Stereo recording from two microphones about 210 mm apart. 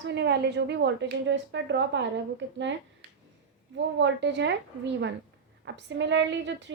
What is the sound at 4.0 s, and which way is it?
A woman's voice, 55° right (ahead or behind).